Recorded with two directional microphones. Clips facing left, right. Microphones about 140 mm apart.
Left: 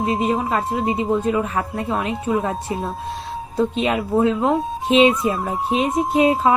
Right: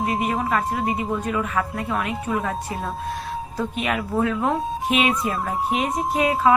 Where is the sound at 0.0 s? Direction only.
25° left (ahead or behind).